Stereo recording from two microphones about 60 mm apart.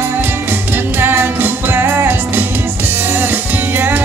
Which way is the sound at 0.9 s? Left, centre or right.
Right.